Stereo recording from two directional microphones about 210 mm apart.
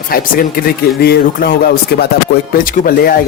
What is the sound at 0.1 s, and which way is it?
Speech, 45° left (ahead or behind).